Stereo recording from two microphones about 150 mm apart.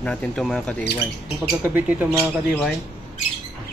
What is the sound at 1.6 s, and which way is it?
Speech, 15° right (ahead or behind).